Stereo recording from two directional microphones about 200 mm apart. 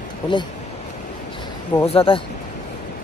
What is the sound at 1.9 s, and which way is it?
Speech, 30° left (ahead or behind).